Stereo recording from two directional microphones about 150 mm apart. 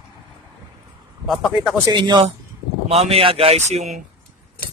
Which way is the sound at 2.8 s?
40° right (ahead or behind).